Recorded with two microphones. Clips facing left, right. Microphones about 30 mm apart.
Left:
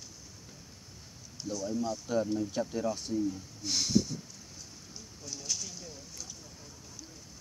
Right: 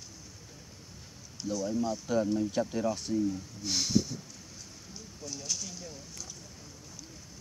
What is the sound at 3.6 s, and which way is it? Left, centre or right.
Speech, centre.